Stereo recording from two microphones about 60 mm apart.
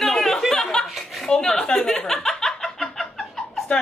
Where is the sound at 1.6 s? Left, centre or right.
Centre.